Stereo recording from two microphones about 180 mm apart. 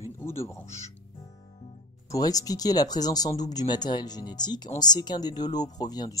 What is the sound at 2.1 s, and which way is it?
Speech, 20° left (ahead or behind).